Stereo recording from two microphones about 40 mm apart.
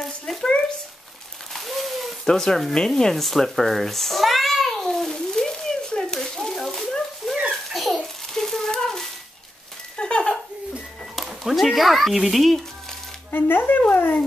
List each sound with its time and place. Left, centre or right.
0.3 s stir: centre
1.5 s hoot: centre
2.2 s speech: centre
2.9 s babbling: centre
7.2 s a sound: centre
7.7 s a sound: centre
8.8 s dog: centre
9.9 s a sound: left
11.4 s speech: centre
13.3 s speech: left